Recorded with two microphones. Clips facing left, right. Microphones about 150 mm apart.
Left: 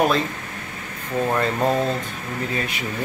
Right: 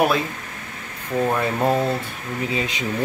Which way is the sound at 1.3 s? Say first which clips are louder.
Left 1 dB; 10° right (ahead or behind).